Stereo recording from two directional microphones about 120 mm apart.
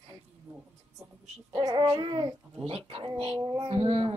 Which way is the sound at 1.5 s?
35° right (ahead or behind).